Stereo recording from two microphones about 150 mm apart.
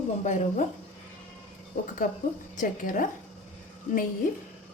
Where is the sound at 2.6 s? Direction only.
60° left (ahead or behind).